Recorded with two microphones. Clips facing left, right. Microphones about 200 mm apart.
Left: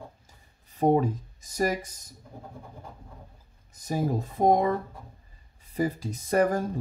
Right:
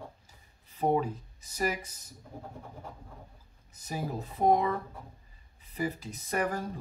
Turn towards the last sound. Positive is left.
turn(degrees=40)  # may be behind; listen again after turning